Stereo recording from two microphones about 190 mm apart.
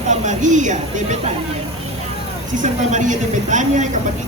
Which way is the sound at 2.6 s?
40° right (ahead or behind).